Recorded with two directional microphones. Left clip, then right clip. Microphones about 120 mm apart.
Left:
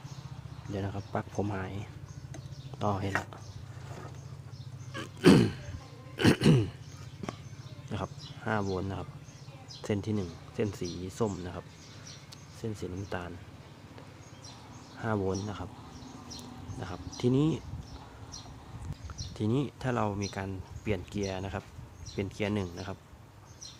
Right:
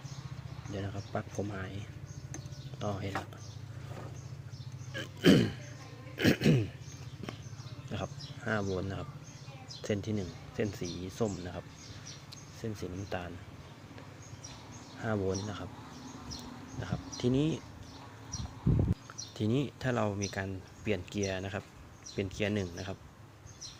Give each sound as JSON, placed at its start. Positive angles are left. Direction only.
{"t": 0.7, "sound": "speech", "side_deg": 30}
{"t": 4.9, "sound": "burping", "side_deg": 45}
{"t": 6.1, "sound": "throat clearing", "side_deg": 45}
{"t": 7.2, "sound": "clip-clop", "side_deg": 40}
{"t": 7.9, "sound": "sheep", "side_deg": 30}
{"t": 8.4, "sound": "speech", "side_deg": 15}
{"t": 9.8, "sound": "speech", "side_deg": 30}
{"t": 12.6, "sound": "speech", "side_deg": 25}
{"t": 15.0, "sound": "speech", "side_deg": 20}
{"t": 16.8, "sound": "speech", "side_deg": 25}
{"t": 19.4, "sound": "speech", "side_deg": 15}